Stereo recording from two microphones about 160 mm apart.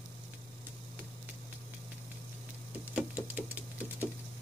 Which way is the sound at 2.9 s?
10° right (ahead or behind).